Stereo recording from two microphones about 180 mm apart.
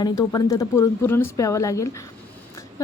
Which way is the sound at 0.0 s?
20° left (ahead or behind).